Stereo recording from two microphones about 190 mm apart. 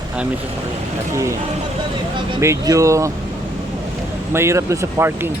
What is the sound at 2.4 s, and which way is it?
Speech, 15° right (ahead or behind).